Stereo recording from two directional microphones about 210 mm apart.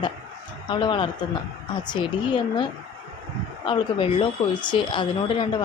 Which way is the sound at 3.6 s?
25° left (ahead or behind).